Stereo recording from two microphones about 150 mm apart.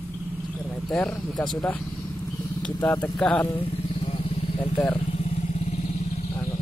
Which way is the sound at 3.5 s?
35° left (ahead or behind).